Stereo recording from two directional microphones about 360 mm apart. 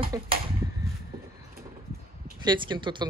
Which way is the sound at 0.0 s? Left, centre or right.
Centre.